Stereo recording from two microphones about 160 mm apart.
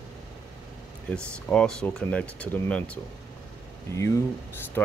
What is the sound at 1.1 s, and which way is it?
Speech, 5° left (ahead or behind).